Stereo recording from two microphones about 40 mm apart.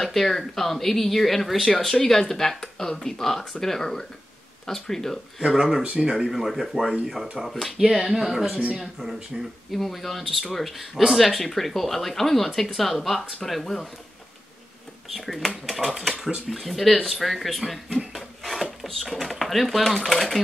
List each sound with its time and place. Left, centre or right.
0.0 s speech: centre
5.8 s speech: right
6.1 s speech: centre
7.7 s speech: centre
8.5 s speech: right
9.0 s speech: centre
15.0 s speech: centre
17.9 s a sound: centre
18.9 s speech: centre